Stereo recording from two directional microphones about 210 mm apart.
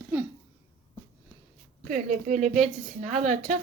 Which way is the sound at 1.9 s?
35° right (ahead or behind).